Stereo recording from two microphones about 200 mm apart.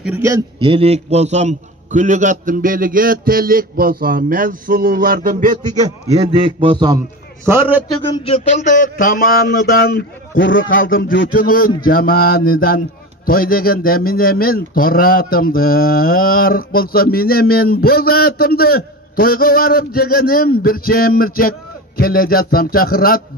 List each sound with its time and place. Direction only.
0.0 s a man's voice: 10° right (ahead or behind); by 5.8 s 40° right (ahead or behind)
6.0 s a man's voice: 30° right (ahead or behind)
7.4 s a man's voice: 10° right (ahead or behind)
8.1 s a man's voice: 30° left (ahead or behind); by 10.0 s 50° left (ahead or behind)
10.3 s a man's voice: 70° left (ahead or behind)
10.8 s a man's voice: 45° left (ahead or behind)